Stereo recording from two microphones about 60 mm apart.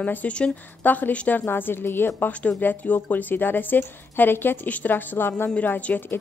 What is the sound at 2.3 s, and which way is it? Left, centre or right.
Speech, left.